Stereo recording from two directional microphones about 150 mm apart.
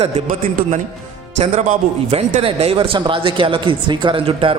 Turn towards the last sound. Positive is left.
turn(degrees=-35)  # may be behind; listen again after turning